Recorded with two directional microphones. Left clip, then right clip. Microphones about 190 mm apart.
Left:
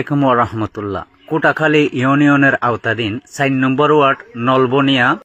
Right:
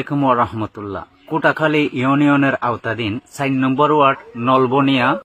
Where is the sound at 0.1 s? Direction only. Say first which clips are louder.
Left 2 dB; 20° left (ahead or behind).